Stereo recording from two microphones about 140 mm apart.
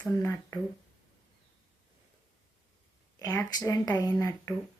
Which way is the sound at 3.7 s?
25° left (ahead or behind).